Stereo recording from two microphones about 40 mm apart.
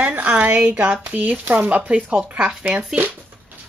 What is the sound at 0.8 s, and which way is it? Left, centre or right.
Speech, right.